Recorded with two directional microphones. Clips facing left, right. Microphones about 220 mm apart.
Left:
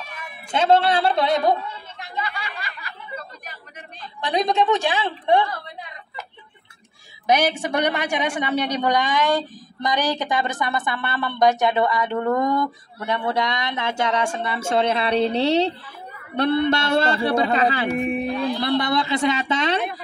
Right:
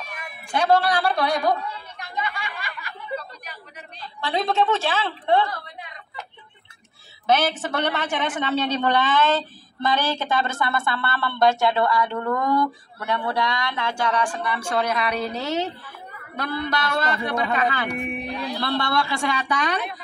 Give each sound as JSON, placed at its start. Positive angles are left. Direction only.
{"t": 0.5, "sound": "a woman's voice", "side_deg": 25}
{"t": 4.2, "sound": "a woman's voice", "side_deg": 15}
{"t": 7.2, "sound": "a woman's voice", "side_deg": 15}
{"t": 18.6, "sound": "a man's voice", "side_deg": 20}